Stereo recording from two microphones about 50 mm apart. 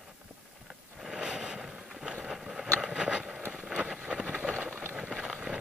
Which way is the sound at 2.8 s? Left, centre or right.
Right.